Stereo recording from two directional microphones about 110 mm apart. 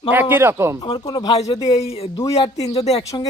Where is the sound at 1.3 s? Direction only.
75° left (ahead or behind).